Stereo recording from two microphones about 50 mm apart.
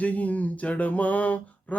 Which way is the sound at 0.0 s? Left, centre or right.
Left.